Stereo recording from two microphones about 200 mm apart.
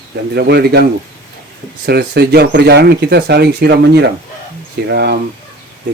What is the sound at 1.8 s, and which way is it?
Speech, 55° right (ahead or behind).